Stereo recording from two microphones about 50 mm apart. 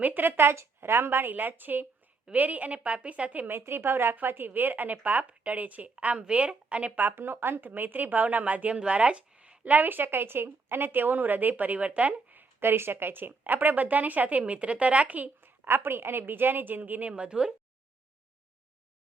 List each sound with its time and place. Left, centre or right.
0.0 s a woman's voice: right
3.6 s a woman's voice: right
4.1 s a woman's voice: right
6.9 s a woman's voice: right
15.4 s a woman's voice: right
17.1 s a woman's voice: right